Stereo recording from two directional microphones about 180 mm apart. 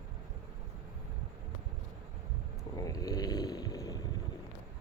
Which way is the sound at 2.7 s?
20° left (ahead or behind).